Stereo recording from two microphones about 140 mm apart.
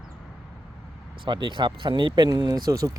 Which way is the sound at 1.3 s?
35° right (ahead or behind).